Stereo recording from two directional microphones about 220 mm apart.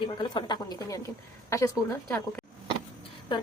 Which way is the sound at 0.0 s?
20° left (ahead or behind).